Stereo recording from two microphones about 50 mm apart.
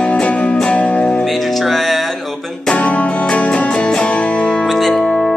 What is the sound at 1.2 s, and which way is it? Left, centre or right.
Music, centre.